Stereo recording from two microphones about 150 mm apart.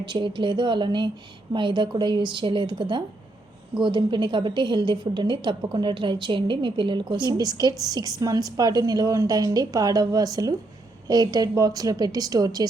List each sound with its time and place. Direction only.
0.0 s a woman's voice: 30° right (ahead or behind)